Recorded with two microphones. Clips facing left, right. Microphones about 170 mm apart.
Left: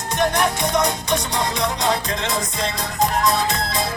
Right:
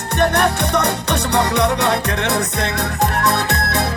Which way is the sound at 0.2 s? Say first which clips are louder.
Right 3 dB; 65° right (ahead or behind).